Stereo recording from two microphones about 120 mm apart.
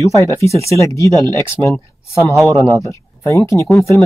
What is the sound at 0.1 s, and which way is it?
Speech, 25° left (ahead or behind).